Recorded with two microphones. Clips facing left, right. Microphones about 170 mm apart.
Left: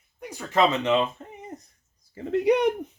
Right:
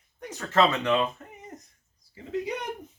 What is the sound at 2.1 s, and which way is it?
Mantra, 65° left (ahead or behind).